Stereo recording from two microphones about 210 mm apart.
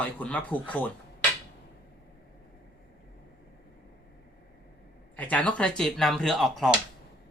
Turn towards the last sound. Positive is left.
turn(degrees=0)  # may be behind; listen again after turning